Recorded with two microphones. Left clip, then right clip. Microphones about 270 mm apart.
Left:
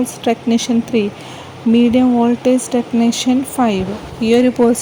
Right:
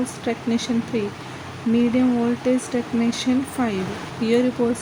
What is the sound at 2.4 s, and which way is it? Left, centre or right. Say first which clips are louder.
Speech: left 7 dB; left.